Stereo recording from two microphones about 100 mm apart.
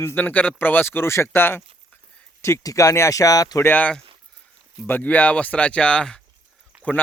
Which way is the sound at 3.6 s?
15° left (ahead or behind).